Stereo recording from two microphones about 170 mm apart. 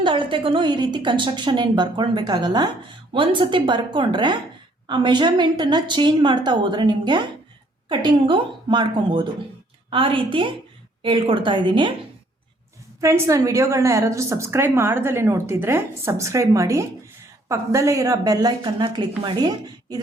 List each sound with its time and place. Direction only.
0.0 s a woman's voice: 30° right (ahead or behind)
13.0 s a woman's voice: 15° right (ahead or behind)